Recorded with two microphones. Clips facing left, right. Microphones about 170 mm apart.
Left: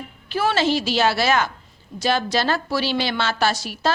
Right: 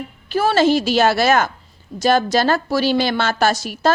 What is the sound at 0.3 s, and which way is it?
A woman's voice, 45° right (ahead or behind).